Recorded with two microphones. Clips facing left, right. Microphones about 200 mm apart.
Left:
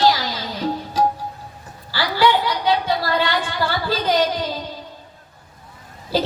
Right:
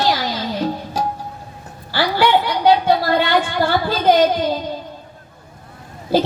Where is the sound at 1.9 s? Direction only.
55° right (ahead or behind).